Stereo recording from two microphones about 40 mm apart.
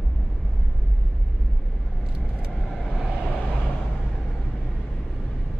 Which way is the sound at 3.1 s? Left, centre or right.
Centre.